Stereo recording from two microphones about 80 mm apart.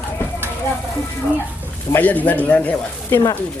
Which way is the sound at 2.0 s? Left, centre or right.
Centre.